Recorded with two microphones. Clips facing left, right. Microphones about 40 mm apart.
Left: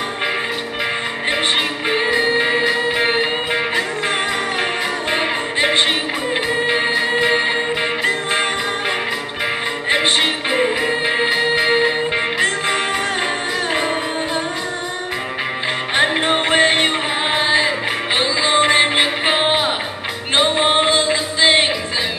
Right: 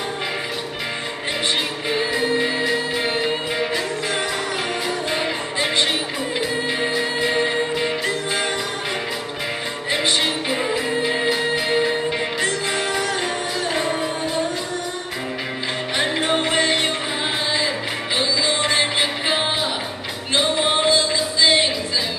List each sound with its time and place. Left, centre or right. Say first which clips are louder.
1.9 s music: left 4 dB; left
5.1 s music: left 4 dB; left
9.8 s music: left 4 dB; left
16.0 s music: left 4 dB; left